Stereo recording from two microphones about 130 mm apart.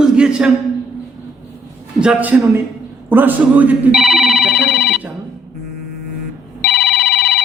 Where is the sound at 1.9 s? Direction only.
10° right (ahead or behind).